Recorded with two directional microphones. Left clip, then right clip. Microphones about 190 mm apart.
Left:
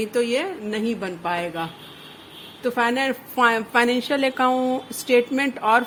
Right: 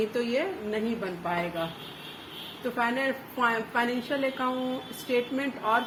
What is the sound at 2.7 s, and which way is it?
A woman's voice, 60° left (ahead or behind).